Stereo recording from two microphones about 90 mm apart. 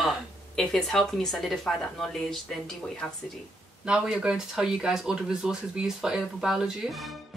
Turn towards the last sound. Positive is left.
turn(degrees=-5)  # may be behind; listen again after turning